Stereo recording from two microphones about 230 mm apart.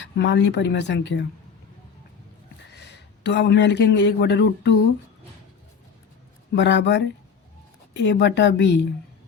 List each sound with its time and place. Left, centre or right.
0.0 s speech: left
2.8 s speech: left
6.5 s speech: left